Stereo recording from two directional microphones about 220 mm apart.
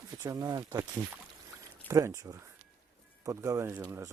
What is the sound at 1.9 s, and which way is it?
Speech, 15° right (ahead or behind).